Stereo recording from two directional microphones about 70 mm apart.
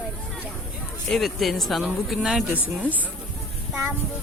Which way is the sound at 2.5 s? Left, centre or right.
Right.